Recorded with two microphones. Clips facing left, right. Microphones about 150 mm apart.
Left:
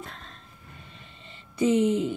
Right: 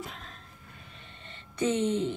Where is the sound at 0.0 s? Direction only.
5° right (ahead or behind).